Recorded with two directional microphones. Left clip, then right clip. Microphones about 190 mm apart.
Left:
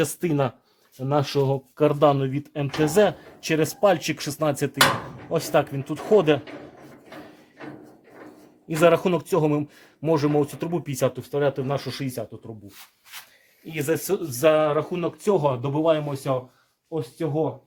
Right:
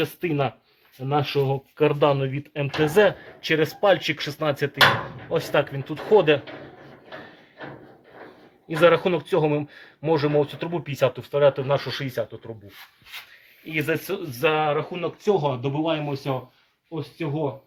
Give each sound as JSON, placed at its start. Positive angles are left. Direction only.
{"t": 0.0, "sound": "speech", "side_deg": 45}
{"t": 3.4, "sound": "speech", "side_deg": 50}
{"t": 5.3, "sound": "speech", "side_deg": 45}
{"t": 8.8, "sound": "speech", "side_deg": 50}
{"t": 13.7, "sound": "speech", "side_deg": 45}
{"t": 15.6, "sound": "speech", "side_deg": 30}